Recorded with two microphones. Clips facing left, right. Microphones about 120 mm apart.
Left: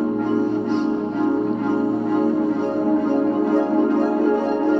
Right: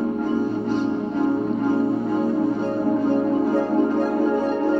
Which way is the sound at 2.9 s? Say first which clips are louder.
Left 1 dB; centre (ahead or behind).